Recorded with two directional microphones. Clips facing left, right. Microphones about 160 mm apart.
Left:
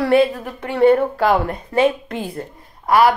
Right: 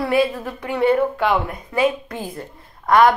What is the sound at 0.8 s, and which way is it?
A woman's voice, 45° left (ahead or behind).